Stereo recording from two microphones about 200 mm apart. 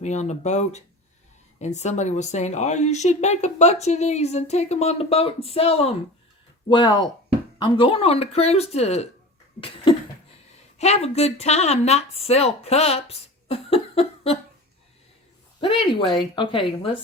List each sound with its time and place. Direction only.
0.0 s a woman's voice: 35° left (ahead or behind)
15.6 s speech: 25° left (ahead or behind)